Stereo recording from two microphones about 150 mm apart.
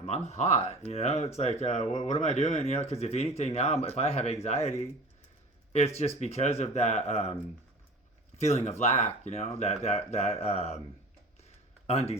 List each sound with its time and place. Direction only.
0.0 s speech: 50° left (ahead or behind)
6.1 s speech: 45° left (ahead or behind)
8.4 s speech: 45° left (ahead or behind)
11.9 s speech: 45° left (ahead or behind)